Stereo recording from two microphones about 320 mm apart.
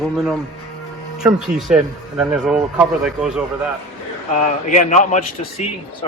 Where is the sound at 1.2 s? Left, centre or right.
Centre.